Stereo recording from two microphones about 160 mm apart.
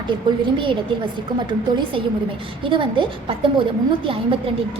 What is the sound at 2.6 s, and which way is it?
A woman's voice, 30° right (ahead or behind).